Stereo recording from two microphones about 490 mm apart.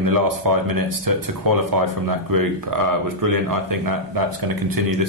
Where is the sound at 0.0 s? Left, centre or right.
Right.